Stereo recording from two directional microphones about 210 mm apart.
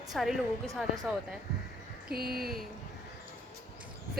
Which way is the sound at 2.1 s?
45° right (ahead or behind).